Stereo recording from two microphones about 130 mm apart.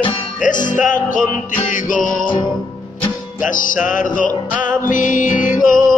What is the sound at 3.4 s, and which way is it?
Music, 90° left.